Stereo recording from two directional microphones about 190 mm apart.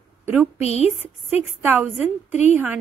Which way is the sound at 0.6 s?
35° left (ahead or behind).